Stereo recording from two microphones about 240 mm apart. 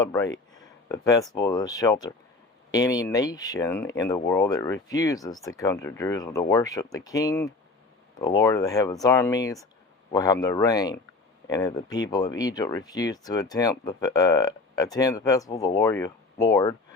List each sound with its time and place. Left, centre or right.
0.0 s speech: centre